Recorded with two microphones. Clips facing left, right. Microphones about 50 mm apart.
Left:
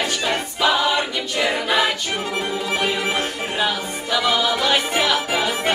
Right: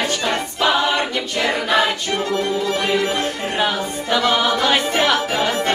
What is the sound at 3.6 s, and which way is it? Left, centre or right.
Music, right.